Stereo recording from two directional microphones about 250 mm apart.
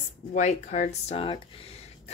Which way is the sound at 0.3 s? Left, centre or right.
Left.